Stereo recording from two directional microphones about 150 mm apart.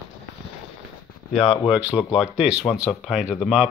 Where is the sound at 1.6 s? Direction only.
10° right (ahead or behind).